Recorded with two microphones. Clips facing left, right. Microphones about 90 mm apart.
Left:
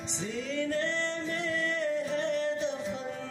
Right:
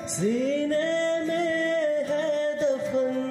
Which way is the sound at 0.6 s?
50° right (ahead or behind).